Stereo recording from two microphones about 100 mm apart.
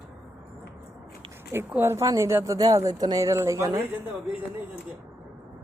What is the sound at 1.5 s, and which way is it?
Speech, 20° right (ahead or behind).